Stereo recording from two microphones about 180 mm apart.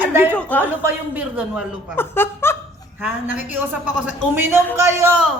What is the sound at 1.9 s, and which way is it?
Speech, 10° left (ahead or behind).